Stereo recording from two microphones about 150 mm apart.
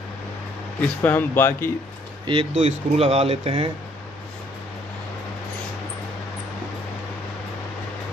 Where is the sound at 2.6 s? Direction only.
45° right (ahead or behind).